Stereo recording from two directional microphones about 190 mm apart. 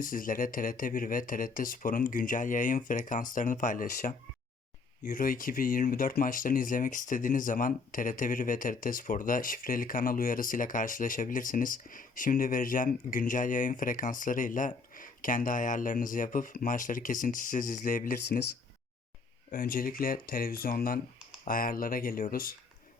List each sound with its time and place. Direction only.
0.0 s speech: 45° left (ahead or behind)
19.5 s speech: 50° left (ahead or behind)